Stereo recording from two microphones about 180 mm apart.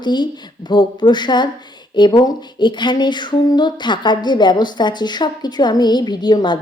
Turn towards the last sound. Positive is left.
turn(degrees=25)  # may be behind; listen again after turning